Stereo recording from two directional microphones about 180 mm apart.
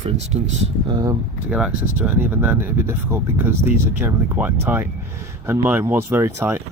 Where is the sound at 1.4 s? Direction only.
5° right (ahead or behind).